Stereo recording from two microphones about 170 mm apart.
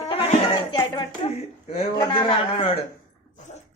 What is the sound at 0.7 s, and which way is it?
Speech, 30° left (ahead or behind).